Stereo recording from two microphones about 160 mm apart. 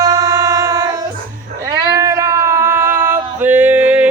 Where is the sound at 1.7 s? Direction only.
20° right (ahead or behind).